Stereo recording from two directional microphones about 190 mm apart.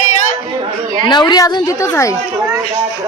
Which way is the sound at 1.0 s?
25° left (ahead or behind).